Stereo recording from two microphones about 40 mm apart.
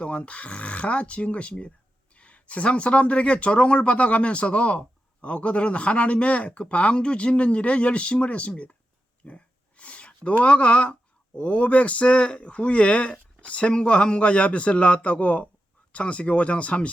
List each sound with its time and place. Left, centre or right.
0.0 s speech: left
9.2 s a sound: left
11.3 s speech: left